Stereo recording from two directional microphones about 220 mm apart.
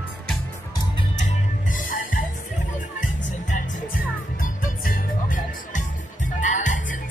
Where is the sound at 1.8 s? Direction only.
40° left (ahead or behind).